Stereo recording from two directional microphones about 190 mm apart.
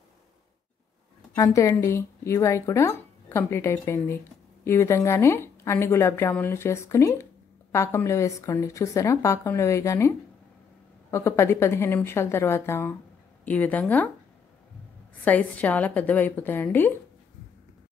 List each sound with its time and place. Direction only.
1.3 s speech: 15° left (ahead or behind)
15.2 s speech: 10° left (ahead or behind)